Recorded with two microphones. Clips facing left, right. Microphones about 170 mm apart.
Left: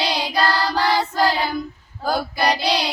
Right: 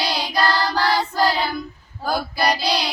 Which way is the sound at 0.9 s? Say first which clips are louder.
Even; 5° left (ahead or behind).